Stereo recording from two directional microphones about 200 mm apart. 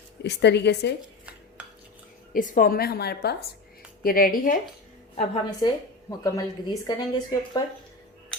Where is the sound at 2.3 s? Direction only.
40° left (ahead or behind).